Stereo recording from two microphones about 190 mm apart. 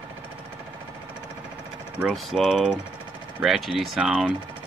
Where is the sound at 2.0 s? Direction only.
Centre (ahead or behind).